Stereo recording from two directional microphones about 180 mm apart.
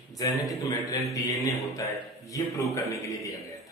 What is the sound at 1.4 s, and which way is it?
A man's voice, 15° left (ahead or behind).